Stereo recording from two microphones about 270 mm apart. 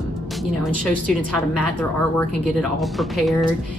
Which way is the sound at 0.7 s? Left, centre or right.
Right.